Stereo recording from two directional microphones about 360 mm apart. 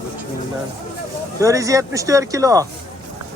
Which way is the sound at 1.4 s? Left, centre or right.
Centre.